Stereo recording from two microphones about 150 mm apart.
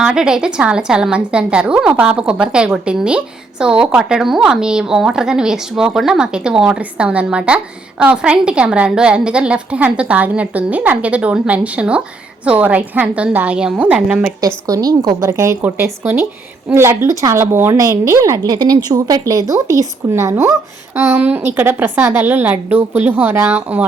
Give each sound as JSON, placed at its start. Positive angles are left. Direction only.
{"t": 0.0, "sound": "a woman's voice", "side_deg": -5}
{"t": 14.4, "sound": "a woman's voice", "side_deg": -25}